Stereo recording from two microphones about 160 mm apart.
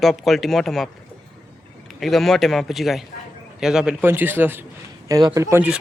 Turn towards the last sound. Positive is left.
turn(degrees=-15)  # may be behind; listen again after turning